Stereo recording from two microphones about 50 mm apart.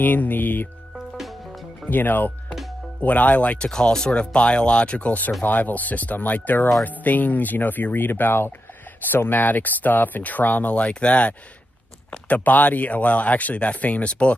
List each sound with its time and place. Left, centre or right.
0.0 s speech: left
0.9 s music: centre
1.9 s speech: left
3.5 s speech: centre